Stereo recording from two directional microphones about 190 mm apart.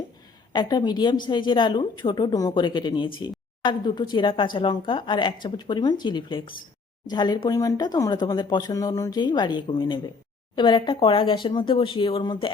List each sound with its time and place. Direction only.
0.5 s speech: 20° left (ahead or behind)